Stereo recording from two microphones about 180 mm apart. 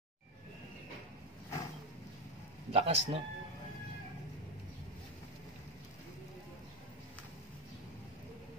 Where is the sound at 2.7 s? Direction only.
35° right (ahead or behind).